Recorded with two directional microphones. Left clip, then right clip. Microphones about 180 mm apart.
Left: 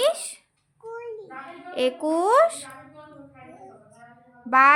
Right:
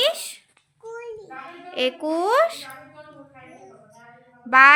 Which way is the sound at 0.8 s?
10° left (ahead or behind).